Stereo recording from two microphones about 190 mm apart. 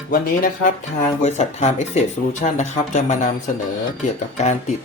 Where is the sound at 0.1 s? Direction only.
45° left (ahead or behind).